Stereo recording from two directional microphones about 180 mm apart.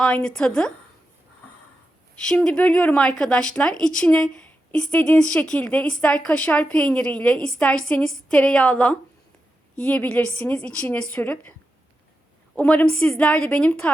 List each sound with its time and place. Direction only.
0.0 s speech: 5° left (ahead or behind)
2.1 s a woman's voice: 5° left (ahead or behind)
12.5 s a woman's voice: 5° left (ahead or behind)